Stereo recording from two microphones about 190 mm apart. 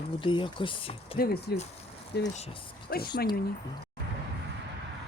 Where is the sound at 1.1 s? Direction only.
55° left (ahead or behind).